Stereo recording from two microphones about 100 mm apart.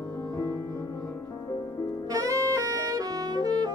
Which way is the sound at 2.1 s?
35° right (ahead or behind).